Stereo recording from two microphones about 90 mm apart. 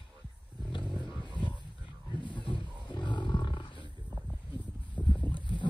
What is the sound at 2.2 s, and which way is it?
Roaring cats, 60° left (ahead or behind).